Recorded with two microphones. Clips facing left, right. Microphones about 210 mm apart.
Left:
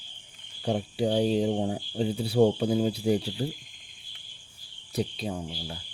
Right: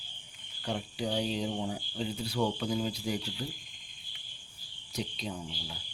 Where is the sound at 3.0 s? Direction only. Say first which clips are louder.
Left 9 dB; 35° left (ahead or behind).